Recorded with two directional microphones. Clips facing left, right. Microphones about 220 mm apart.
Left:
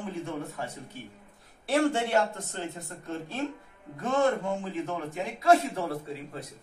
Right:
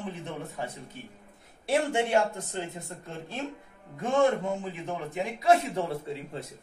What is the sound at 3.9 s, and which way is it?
A man's voice, 15° right (ahead or behind).